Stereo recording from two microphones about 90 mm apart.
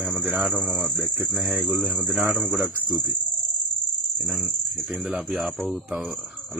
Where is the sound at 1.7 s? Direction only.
15° right (ahead or behind).